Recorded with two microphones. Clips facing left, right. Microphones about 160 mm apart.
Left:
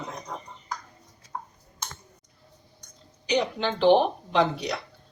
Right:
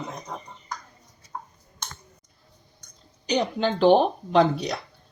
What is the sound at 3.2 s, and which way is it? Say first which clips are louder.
Speech: right 2 dB; 40° right (ahead or behind).